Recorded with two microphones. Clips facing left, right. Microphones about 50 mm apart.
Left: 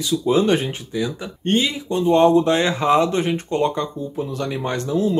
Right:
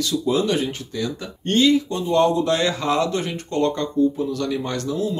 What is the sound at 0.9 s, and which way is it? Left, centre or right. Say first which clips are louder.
Speech: left 2 dB; centre.